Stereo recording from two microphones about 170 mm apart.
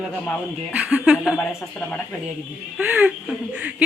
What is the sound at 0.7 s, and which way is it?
Speech, 10° right (ahead or behind).